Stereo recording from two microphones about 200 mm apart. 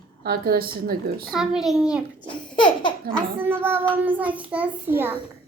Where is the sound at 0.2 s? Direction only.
50° right (ahead or behind).